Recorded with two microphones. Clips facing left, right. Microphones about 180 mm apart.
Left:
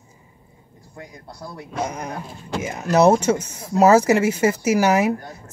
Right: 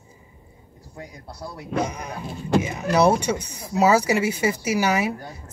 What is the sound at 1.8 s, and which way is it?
Speech, 50° left (ahead or behind).